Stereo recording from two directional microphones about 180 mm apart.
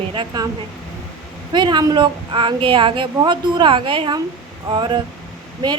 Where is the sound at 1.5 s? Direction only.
25° right (ahead or behind).